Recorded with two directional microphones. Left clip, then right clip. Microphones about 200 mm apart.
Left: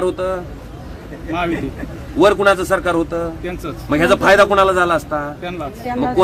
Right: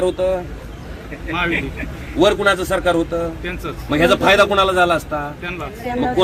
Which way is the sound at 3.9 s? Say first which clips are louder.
Left 2 dB; centre (ahead or behind).